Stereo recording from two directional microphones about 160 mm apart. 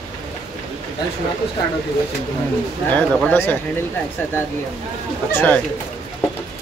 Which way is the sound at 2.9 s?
10° left (ahead or behind).